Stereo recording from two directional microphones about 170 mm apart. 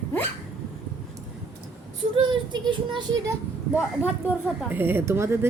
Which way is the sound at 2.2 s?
30° right (ahead or behind).